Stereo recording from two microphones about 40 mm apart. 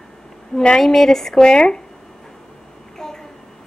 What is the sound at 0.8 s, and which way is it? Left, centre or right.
Speech, centre.